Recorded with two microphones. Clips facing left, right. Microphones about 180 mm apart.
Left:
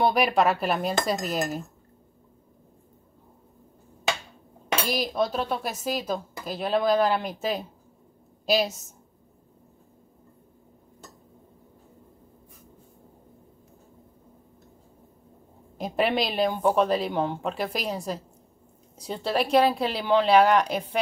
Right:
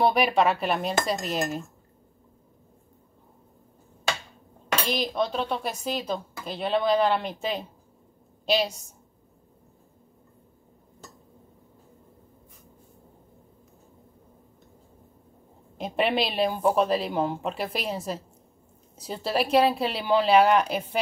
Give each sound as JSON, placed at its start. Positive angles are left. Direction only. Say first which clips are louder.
{"t": 0.0, "sound": "speech", "louder": "even", "side_deg": 0}
{"t": 4.8, "sound": "speech", "louder": "left 1 dB", "side_deg": 5}
{"t": 15.8, "sound": "speech", "louder": "even", "side_deg": 0}